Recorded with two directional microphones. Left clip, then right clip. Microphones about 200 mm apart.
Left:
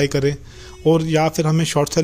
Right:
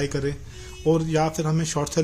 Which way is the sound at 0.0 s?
35° left (ahead or behind).